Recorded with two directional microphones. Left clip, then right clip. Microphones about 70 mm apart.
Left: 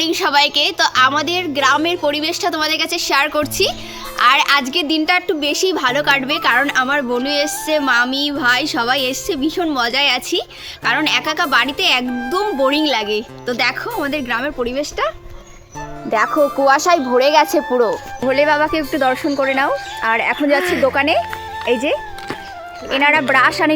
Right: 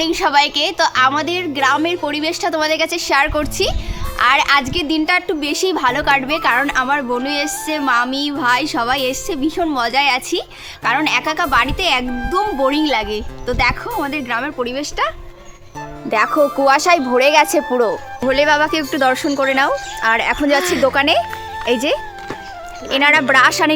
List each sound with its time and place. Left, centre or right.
0.0 s a woman's voice: centre; by 5.9 s right
5.9 s a woman's voice: right
6.4 s a woman's voice: right
7.2 s a woman's voice: centre
7.7 s a woman's voice: right
12.0 s speech: centre
12.7 s a woman's voice: right
16.2 s speech: centre
18.3 s a woman's voice: right
18.6 s a woman's voice: right
20.3 s a woman's voice: right
22.9 s a woman's voice: right